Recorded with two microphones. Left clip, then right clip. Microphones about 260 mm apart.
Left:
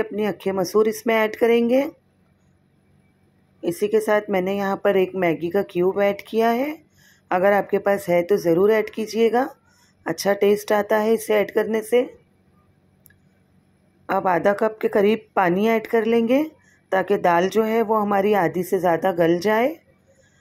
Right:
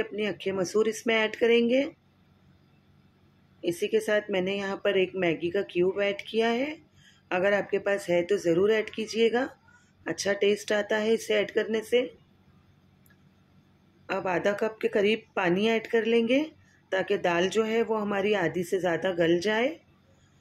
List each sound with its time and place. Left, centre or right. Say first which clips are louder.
0.0 s speech: left 6 dB; centre
3.6 s speech: left 7 dB; centre
14.0 s speech: left 8 dB; centre
17.8 s speech: left 9 dB; centre
18.1 s speech: left 6 dB; centre